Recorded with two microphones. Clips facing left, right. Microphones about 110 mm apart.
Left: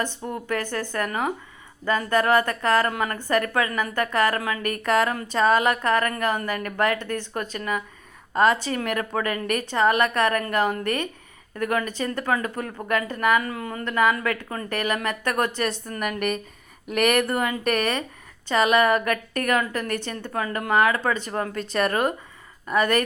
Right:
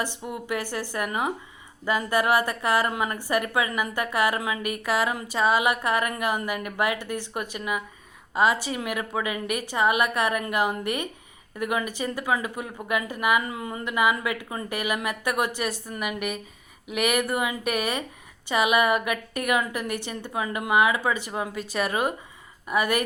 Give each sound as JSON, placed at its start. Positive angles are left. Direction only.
{"t": 0.3, "sound": "speech", "side_deg": -15}